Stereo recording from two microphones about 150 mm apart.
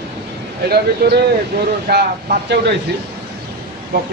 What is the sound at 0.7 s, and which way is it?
Speech, 90° right.